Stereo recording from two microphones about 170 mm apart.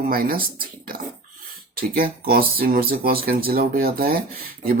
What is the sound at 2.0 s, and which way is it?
Speech, 60° right (ahead or behind).